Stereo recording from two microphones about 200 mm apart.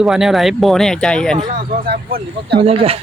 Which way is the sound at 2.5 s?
30° right (ahead or behind).